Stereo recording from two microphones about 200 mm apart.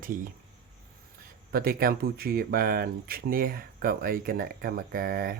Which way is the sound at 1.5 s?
50° right (ahead or behind).